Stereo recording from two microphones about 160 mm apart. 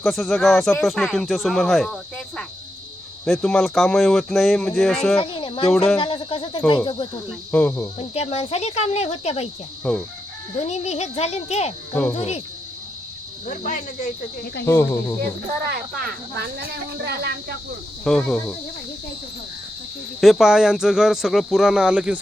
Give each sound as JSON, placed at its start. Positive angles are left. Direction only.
{"t": 0.0, "sound": "speech", "side_deg": 0}
{"t": 5.2, "sound": "speech", "side_deg": 30}
{"t": 5.7, "sound": "speech", "side_deg": 5}
{"t": 6.0, "sound": "speech", "side_deg": 30}
{"t": 7.5, "sound": "speech", "side_deg": 15}
{"t": 7.9, "sound": "speech", "side_deg": 40}
{"t": 9.9, "sound": "speech", "side_deg": 5}
{"t": 10.6, "sound": "speech", "side_deg": 45}
{"t": 13.4, "sound": "speech", "side_deg": 55}
{"t": 14.6, "sound": "speech", "side_deg": 15}
{"t": 15.6, "sound": "speech", "side_deg": -80}
{"t": 18.0, "sound": "speech", "side_deg": 5}
{"t": 20.2, "sound": "speech", "side_deg": -5}